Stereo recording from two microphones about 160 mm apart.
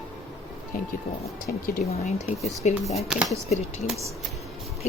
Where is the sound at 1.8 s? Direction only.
45° left (ahead or behind).